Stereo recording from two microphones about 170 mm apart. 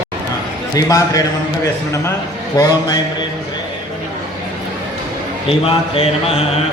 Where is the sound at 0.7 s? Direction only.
20° left (ahead or behind).